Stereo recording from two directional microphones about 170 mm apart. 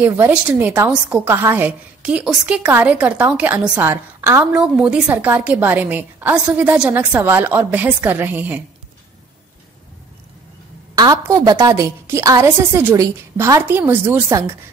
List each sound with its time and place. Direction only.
0.0 s a woman's voice: 10° right (ahead or behind)
11.0 s a woman's voice: 20° right (ahead or behind)